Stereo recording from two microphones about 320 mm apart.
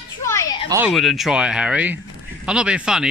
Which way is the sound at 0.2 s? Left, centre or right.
Centre.